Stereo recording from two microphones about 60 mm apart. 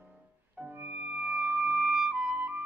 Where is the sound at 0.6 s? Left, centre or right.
Right.